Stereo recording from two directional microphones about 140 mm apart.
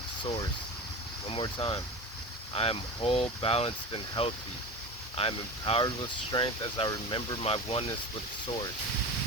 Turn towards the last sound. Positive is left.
turn(degrees=40)  # may be behind; listen again after turning